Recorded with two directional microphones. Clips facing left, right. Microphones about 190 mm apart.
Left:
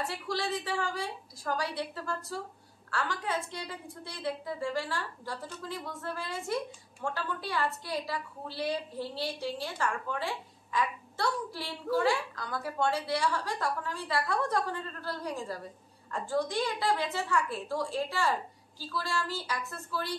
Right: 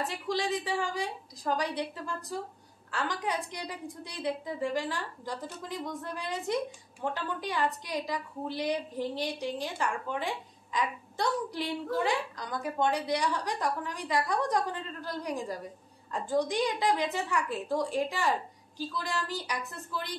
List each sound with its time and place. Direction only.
0.0 s a woman's voice: 15° right (ahead or behind)